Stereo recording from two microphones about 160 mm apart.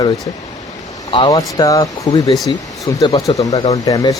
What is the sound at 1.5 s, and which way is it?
Speech, 20° left (ahead or behind).